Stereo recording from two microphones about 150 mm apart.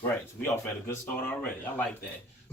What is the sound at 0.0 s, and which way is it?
Speech, 15° left (ahead or behind).